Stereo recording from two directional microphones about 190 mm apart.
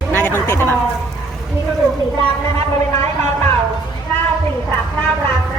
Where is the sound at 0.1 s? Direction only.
10° left (ahead or behind).